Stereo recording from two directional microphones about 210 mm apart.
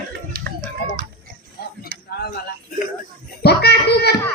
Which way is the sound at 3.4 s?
50° left (ahead or behind).